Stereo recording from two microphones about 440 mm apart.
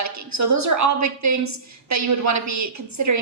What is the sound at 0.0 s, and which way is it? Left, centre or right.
A woman's voice, right.